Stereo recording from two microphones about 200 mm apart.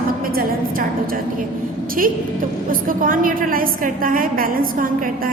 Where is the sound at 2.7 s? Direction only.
45° right (ahead or behind).